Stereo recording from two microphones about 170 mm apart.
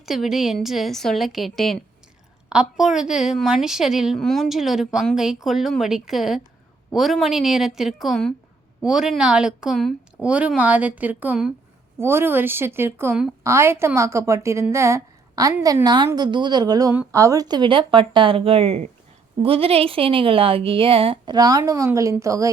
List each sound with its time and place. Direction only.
0.0 s a woman's voice: centre (ahead or behind); by 22.4 s 20° right (ahead or behind)